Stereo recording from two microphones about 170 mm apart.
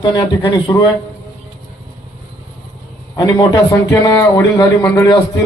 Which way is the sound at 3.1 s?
25° left (ahead or behind).